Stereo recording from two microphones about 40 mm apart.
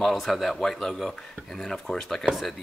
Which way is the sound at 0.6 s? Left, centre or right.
Centre.